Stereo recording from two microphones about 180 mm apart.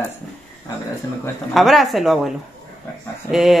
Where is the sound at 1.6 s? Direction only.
Centre (ahead or behind).